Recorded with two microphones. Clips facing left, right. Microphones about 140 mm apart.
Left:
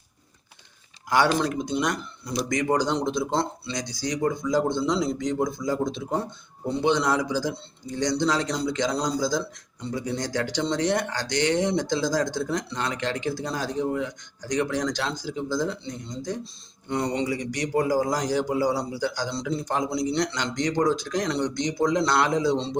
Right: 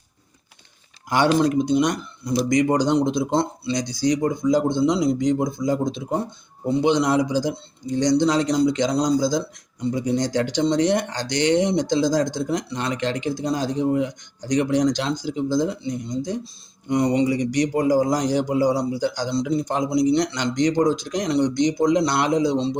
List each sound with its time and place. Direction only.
1.1 s a man's voice: 20° right (ahead or behind)